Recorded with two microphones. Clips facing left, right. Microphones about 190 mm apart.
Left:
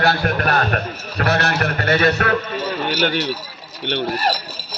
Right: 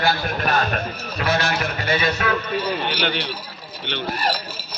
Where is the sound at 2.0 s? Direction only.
55° left (ahead or behind).